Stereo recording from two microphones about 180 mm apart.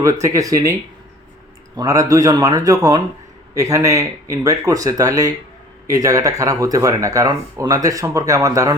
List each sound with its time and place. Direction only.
0.0 s speech: 15° right (ahead or behind)